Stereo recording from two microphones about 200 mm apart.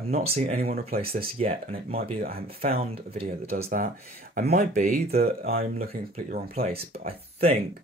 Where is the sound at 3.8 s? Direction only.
40° right (ahead or behind).